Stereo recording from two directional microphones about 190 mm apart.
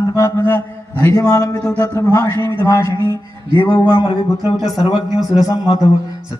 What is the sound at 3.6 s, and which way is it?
Speech, 25° left (ahead or behind).